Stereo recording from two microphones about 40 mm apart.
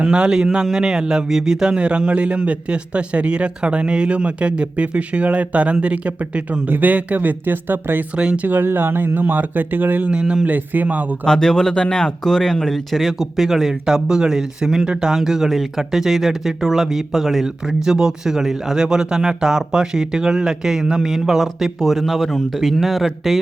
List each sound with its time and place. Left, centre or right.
0.0 s a man's voice: right
6.7 s speech: right
10.1 s a man's voice: right
10.4 s speech: right
11.3 s speech: centre
17.8 s speech: centre